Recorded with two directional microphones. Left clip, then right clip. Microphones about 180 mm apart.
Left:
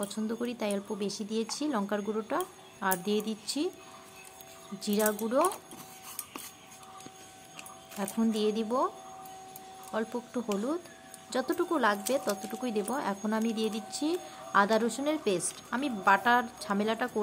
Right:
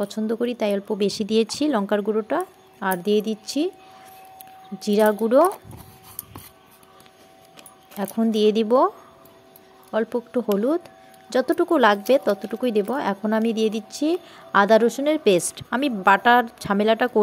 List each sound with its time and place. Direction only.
0.0 s speech: 35° right (ahead or behind)
4.7 s speech: 35° right (ahead or behind)
8.0 s speech: 35° right (ahead or behind)